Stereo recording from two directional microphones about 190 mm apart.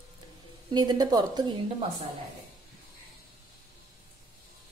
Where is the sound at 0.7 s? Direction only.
20° right (ahead or behind).